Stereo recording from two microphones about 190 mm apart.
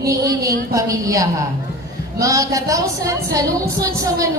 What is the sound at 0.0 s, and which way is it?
A woman's voice, 15° right (ahead or behind).